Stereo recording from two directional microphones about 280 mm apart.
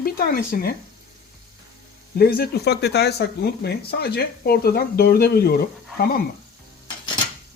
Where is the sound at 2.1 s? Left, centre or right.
Left.